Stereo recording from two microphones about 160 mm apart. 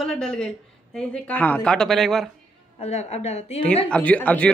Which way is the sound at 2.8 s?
40° left (ahead or behind).